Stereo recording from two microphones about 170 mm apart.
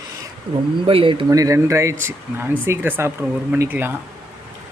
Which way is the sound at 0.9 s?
30° right (ahead or behind).